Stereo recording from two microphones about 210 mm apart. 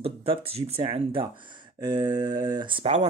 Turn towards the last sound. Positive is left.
turn(degrees=-30)  # may be behind; listen again after turning